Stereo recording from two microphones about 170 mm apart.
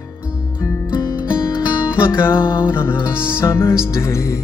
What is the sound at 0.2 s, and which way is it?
Music, 10° right (ahead or behind).